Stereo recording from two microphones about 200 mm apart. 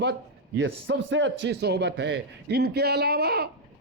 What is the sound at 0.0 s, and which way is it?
A man's voice, 60° right (ahead or behind).